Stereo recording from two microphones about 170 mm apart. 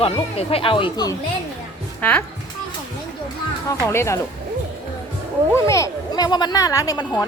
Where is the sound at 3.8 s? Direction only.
15° left (ahead or behind).